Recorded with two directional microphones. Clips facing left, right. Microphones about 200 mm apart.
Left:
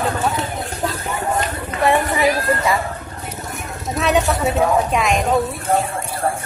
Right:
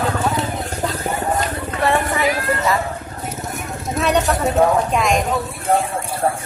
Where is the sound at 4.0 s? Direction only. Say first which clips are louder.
Even; centre (ahead or behind).